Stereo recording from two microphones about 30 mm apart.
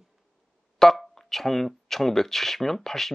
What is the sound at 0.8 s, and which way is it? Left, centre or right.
Speech, centre.